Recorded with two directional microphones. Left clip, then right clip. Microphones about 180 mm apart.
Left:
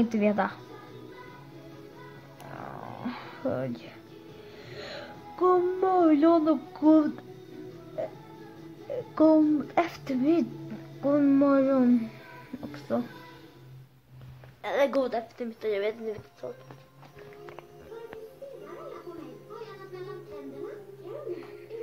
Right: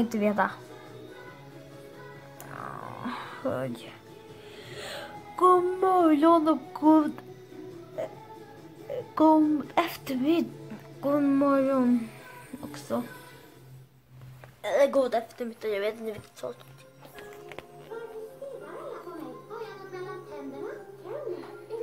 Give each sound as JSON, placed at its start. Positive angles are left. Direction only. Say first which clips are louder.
{"t": 0.0, "sound": "a woman's voice", "louder": "even", "side_deg": 0}
{"t": 2.5, "sound": "a sound", "louder": "right 2 dB", "side_deg": 0}
{"t": 9.1, "sound": "a woman's voice", "louder": "even", "side_deg": 0}
{"t": 14.6, "sound": "a woman's voice", "louder": "right 2 dB", "side_deg": 20}
{"t": 15.0, "sound": "a woman's voice", "louder": "right 3 dB", "side_deg": -5}
{"t": 16.4, "sound": "speech", "louder": "right 2 dB", "side_deg": -15}